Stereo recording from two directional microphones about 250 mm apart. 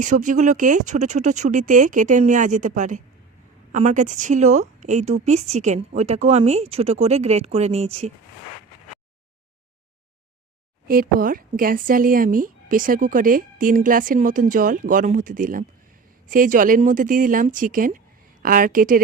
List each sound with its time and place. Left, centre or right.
0.0 s a woman's voice: right
10.8 s speech: right